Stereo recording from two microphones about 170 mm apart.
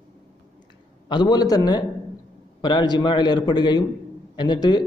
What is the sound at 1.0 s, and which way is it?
Speech, 25° left (ahead or behind).